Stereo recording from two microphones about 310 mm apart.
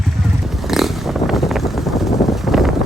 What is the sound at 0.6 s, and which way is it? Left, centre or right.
Vehicle, centre.